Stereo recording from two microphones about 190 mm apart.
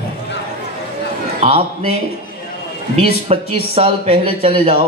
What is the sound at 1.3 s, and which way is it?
Speech, 35° right (ahead or behind).